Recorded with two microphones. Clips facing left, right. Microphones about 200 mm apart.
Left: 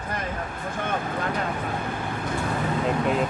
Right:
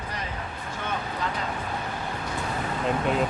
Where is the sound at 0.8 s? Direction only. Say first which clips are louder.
Left 3 dB; 55° left (ahead or behind).